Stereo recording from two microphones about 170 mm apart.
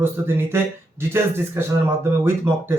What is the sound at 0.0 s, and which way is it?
A man's voice, 15° right (ahead or behind).